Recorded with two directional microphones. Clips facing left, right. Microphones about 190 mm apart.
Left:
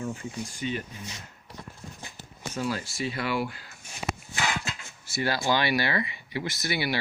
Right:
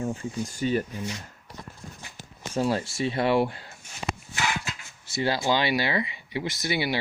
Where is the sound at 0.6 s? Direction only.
40° right (ahead or behind).